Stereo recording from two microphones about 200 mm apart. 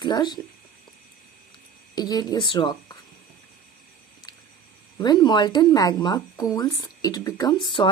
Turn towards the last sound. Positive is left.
turn(degrees=25)  # may be behind; listen again after turning